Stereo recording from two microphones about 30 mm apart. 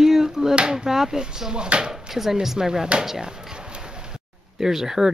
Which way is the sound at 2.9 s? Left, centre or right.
Right.